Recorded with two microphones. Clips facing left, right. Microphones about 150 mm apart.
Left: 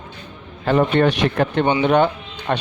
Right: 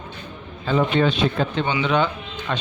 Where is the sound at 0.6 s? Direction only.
65° left (ahead or behind).